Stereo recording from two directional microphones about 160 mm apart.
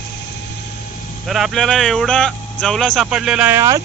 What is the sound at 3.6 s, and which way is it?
Speech, 20° right (ahead or behind).